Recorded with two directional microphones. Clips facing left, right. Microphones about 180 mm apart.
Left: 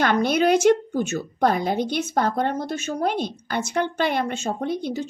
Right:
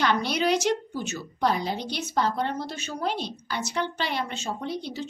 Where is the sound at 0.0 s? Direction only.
50° left (ahead or behind).